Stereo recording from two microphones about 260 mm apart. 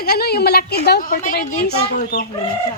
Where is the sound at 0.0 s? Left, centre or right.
Left.